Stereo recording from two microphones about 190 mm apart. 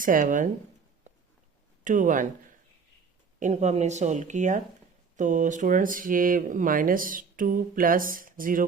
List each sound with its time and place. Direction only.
0.0 s speech: 45° right (ahead or behind)
1.8 s speech: 45° right (ahead or behind)
3.4 s speech: 35° right (ahead or behind)